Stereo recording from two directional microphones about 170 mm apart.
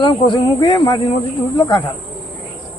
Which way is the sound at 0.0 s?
30° left (ahead or behind).